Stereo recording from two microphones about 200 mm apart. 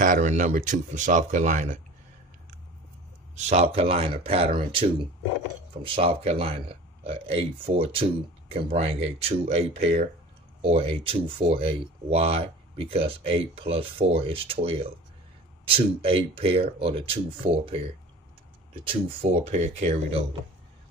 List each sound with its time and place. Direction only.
0.0 s speech: 40° right (ahead or behind)
3.3 s speech: 35° right (ahead or behind)
5.9 s speech: 30° right (ahead or behind)
18.9 s speech: 30° right (ahead or behind)